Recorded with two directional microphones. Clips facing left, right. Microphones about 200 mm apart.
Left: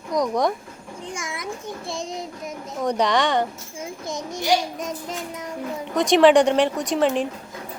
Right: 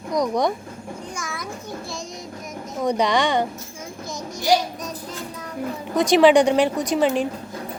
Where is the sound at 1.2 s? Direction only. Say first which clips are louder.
Even; 25° left (ahead or behind).